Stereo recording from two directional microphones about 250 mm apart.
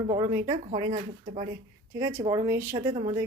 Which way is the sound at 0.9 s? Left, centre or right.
Right.